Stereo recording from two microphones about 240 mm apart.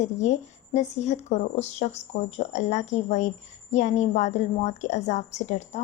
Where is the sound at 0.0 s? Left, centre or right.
Left.